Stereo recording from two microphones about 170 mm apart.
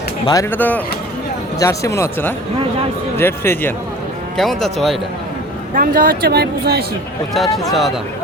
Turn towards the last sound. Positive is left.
turn(degrees=0)  # may be behind; listen again after turning